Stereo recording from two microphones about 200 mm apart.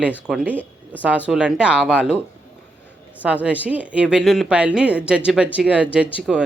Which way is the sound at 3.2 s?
5° right (ahead or behind).